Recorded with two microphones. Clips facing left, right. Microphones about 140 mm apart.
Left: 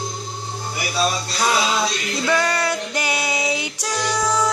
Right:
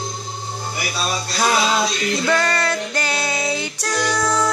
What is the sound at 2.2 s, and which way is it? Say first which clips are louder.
Music: left 1 dB; 10° left (ahead or behind).